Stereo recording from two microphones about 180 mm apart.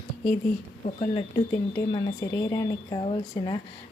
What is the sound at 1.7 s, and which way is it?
Speech, 20° left (ahead or behind).